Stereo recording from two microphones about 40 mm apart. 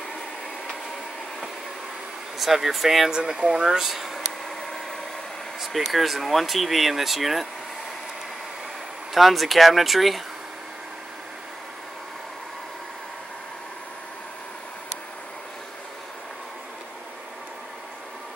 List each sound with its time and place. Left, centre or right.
2.3 s speech: centre
3.1 s speech: centre
5.6 s speech: centre
9.1 s speech: centre